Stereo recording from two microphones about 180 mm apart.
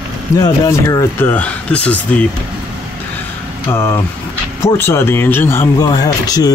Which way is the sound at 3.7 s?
15° left (ahead or behind).